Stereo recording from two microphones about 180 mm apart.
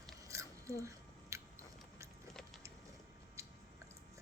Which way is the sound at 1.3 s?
15° right (ahead or behind).